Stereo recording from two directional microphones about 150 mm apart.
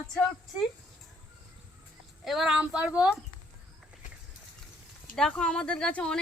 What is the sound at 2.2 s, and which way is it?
Speech, centre (ahead or behind).